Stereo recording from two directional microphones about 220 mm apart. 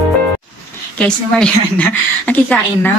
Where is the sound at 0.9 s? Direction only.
5° left (ahead or behind).